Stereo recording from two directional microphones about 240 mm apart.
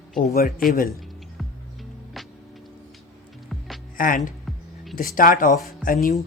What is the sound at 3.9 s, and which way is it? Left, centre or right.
Speech, left.